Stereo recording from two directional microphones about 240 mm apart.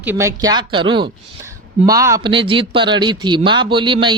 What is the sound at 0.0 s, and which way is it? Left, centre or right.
Speech, centre.